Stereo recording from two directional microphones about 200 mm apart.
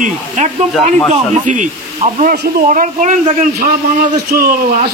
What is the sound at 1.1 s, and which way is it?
Speech, 40° right (ahead or behind).